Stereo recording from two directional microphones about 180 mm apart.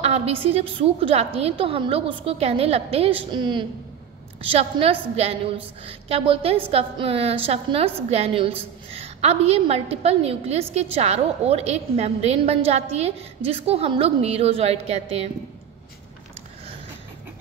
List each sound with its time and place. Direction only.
0.0 s a woman's voice: 35° right (ahead or behind)